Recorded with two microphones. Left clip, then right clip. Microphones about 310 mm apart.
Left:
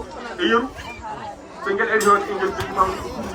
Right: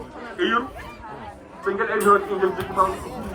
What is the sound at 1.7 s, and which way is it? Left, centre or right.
Speech, centre.